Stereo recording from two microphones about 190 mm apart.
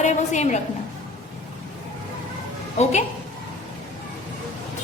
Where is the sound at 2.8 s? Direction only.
35° left (ahead or behind).